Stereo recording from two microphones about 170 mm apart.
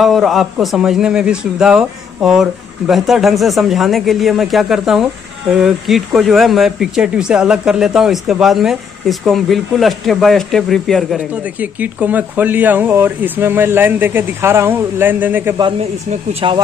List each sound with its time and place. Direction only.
0.0 s speech: centre (ahead or behind)
16.1 s speech: 35° right (ahead or behind)